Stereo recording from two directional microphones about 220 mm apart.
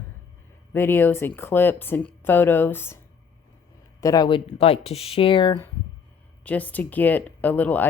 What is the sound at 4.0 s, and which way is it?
Speech, 15° left (ahead or behind).